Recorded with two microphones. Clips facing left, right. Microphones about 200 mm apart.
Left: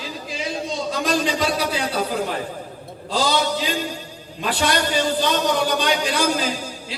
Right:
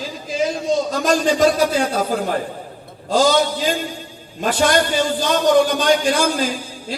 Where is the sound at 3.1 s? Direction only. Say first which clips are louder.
Right 5 dB; 45° right (ahead or behind).